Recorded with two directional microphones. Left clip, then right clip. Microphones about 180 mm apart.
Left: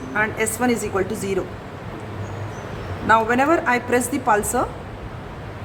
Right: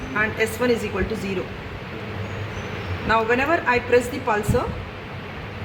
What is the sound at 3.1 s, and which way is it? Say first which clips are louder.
A woman's voice: left 3 dB; 40° left (ahead or behind).